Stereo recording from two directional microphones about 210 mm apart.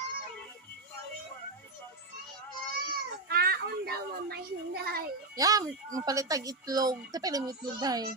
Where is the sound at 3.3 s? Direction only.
45° right (ahead or behind).